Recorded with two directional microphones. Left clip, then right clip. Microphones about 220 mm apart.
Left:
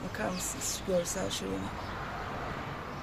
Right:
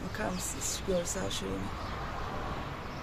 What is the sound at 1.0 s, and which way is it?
Speech, 20° left (ahead or behind).